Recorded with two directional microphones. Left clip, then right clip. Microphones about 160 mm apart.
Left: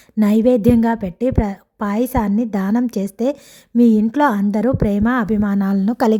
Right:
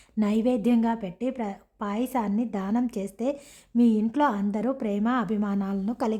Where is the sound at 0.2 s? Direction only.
40° left (ahead or behind).